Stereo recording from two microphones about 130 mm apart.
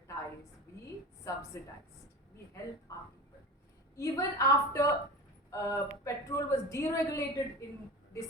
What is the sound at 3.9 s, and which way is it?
A woman's voice, 25° left (ahead or behind).